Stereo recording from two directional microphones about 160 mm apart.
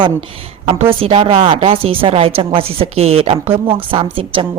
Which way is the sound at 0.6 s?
35° right (ahead or behind).